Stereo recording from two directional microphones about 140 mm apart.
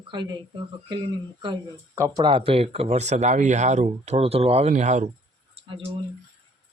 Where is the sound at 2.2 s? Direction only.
40° right (ahead or behind); by 5.1 s 60° right (ahead or behind).